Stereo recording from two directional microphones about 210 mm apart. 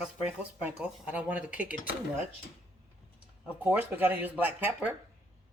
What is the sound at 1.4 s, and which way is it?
Dishes, 40° left (ahead or behind).